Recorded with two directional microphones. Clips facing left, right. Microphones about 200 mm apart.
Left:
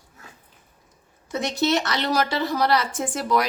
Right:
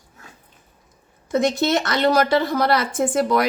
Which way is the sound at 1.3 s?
50° right (ahead or behind).